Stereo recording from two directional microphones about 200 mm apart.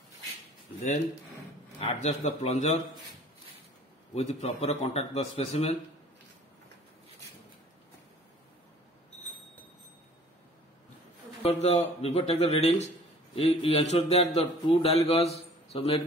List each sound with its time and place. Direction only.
1.9 s a man's voice: 35° left (ahead or behind)
4.1 s a man's voice: 35° left (ahead or behind)
11.4 s a man's voice: 35° left (ahead or behind)